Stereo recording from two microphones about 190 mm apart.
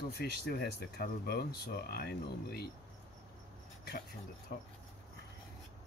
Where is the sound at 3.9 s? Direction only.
55° left (ahead or behind).